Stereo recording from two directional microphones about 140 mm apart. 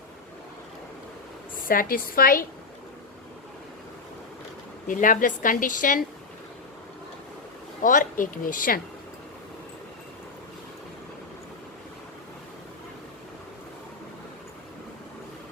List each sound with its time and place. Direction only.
1.6 s a woman's voice: 90° left
4.9 s a woman's voice: 70° left (ahead or behind)
7.8 s a woman's voice: 70° left (ahead or behind)